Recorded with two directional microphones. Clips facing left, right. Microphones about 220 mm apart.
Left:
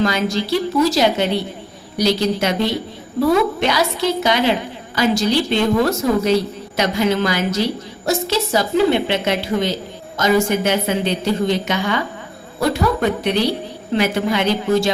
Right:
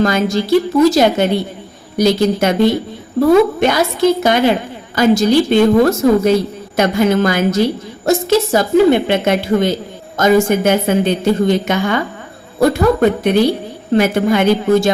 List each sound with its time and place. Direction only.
0.0 s a woman's voice: 50° right (ahead or behind)